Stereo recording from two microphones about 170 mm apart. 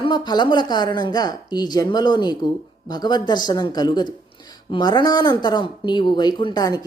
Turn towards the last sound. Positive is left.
turn(degrees=20)  # may be behind; listen again after turning